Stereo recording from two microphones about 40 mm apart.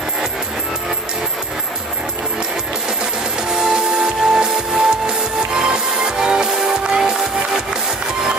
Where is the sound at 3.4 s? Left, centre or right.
Centre.